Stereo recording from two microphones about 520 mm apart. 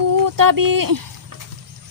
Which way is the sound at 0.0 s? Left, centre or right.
Right.